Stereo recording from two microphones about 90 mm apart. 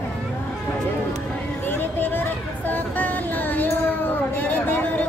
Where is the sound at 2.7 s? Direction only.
20° left (ahead or behind).